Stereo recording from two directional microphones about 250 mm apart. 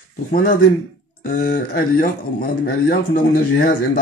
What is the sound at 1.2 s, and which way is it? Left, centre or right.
A man's voice, left.